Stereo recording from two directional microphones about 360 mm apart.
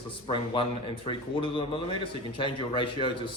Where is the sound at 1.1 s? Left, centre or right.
Centre.